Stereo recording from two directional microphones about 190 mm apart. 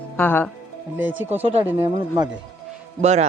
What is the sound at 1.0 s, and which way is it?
Speech, 10° right (ahead or behind).